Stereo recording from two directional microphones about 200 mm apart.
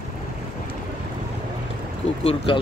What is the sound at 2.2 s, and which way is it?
Speech, 25° left (ahead or behind).